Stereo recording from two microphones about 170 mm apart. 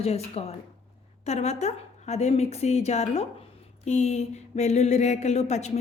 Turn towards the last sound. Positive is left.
turn(degrees=40)  # may be behind; listen again after turning